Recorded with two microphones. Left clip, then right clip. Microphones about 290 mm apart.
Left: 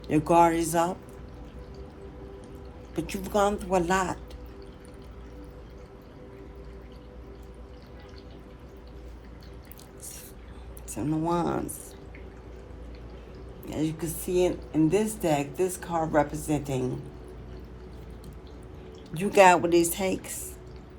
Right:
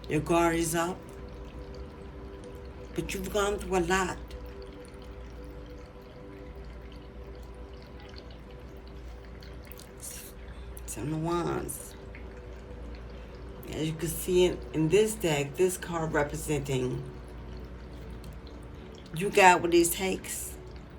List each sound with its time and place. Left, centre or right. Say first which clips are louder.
0.1 s speech: left 5 dB; centre
2.9 s speech: left 3 dB; centre
10.9 s speech: left 4 dB; centre
13.7 s speech: left 3 dB; centre
19.1 s speech: left 2 dB; centre